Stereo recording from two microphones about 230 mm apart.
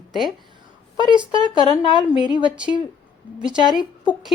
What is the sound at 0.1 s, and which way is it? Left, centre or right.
Speech, centre.